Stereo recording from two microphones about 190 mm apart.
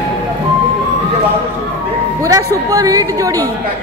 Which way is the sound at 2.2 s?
20° right (ahead or behind).